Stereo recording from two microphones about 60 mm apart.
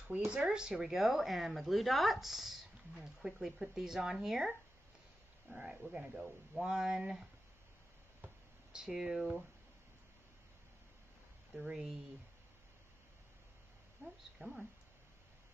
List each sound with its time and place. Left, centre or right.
0.4 s speech: centre
6.1 s speech: centre
6.6 s speech: centre
8.7 s speech: centre
11.6 s speech: centre
14.0 s speech: centre